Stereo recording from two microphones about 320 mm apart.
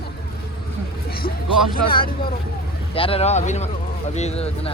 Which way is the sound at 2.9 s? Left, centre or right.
Centre.